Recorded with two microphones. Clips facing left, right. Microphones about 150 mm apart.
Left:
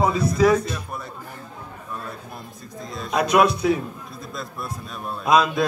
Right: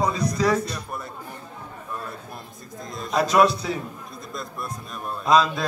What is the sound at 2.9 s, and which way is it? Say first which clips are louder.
Speech: even; centre (ahead or behind).